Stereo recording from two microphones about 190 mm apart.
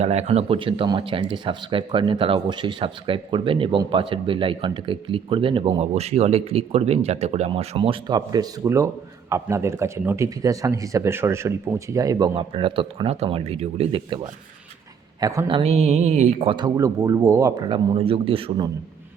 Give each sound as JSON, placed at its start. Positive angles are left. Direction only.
{"t": 0.0, "sound": "speech", "side_deg": -35}
{"t": 15.2, "sound": "speech", "side_deg": -20}
{"t": 17.7, "sound": "speech", "side_deg": -30}